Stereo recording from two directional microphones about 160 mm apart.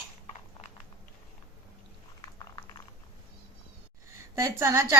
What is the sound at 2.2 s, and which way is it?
Boiling, 25° left (ahead or behind).